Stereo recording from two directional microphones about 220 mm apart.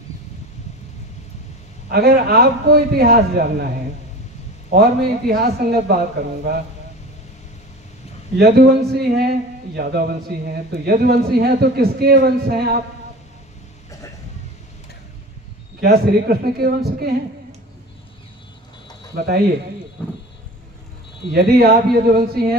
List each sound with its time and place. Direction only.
1.9 s speech: 45° right (ahead or behind)
4.6 s speech: 45° right (ahead or behind)
8.4 s speech: 45° right (ahead or behind)
15.8 s speech: 45° right (ahead or behind)
19.1 s speech: 45° right (ahead or behind)
21.3 s speech: 45° right (ahead or behind)